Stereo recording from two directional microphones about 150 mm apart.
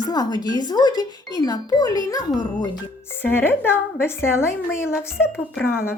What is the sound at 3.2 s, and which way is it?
A woman's voice, 15° left (ahead or behind).